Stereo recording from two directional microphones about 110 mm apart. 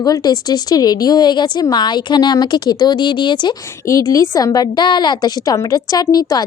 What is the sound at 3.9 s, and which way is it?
A woman's voice, 30° left (ahead or behind).